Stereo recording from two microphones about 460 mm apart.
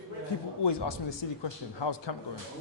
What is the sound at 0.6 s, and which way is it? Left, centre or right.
A man's voice, left.